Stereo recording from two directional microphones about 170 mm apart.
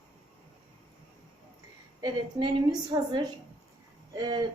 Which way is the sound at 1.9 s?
20° right (ahead or behind).